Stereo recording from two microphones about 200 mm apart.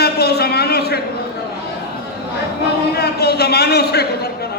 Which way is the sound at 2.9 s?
55° left (ahead or behind).